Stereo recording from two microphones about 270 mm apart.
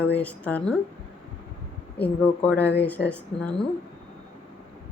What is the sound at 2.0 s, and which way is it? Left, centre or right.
Speech, centre.